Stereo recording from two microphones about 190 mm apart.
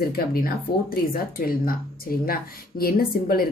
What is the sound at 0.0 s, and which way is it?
A woman's voice, 55° left (ahead or behind).